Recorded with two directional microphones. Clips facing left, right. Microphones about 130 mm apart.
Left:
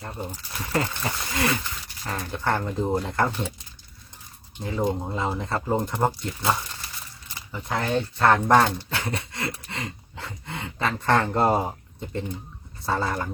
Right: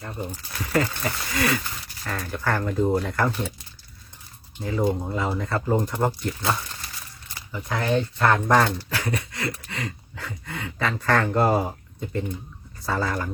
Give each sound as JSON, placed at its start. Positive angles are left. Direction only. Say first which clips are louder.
{"t": 0.6, "sound": "speech", "louder": "right 3 dB", "side_deg": 25}
{"t": 4.6, "sound": "speech", "louder": "right 2 dB", "side_deg": 20}
{"t": 7.3, "sound": "a sound", "louder": "even", "side_deg": 25}
{"t": 8.2, "sound": "speech", "louder": "left 2 dB", "side_deg": 30}
{"t": 12.8, "sound": "speech", "louder": "even", "side_deg": 25}